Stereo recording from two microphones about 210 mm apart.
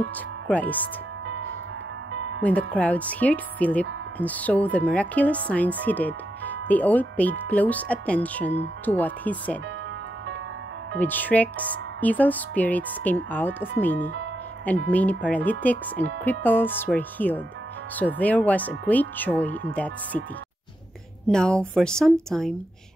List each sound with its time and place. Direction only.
0.5 s speech: 5° left (ahead or behind)
1.2 s music: 65° right (ahead or behind)
2.4 s speech: 5° left (ahead or behind)
11.0 s speech: 10° left (ahead or behind)
21.3 s speech: 5° left (ahead or behind)